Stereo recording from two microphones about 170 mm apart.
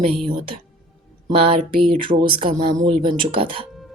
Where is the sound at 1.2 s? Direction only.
35° right (ahead or behind).